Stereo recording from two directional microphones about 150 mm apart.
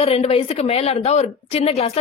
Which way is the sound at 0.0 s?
45° left (ahead or behind).